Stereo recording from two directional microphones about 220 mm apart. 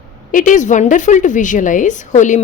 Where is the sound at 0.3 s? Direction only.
35° left (ahead or behind).